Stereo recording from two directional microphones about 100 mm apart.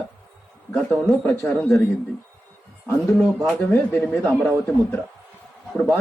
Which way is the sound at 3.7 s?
20° left (ahead or behind).